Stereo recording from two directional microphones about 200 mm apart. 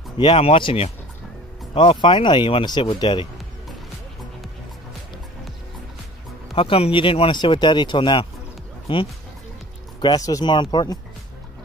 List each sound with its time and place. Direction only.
0.2 s speech: 25° left (ahead or behind)
6.5 s speech: 25° left (ahead or behind)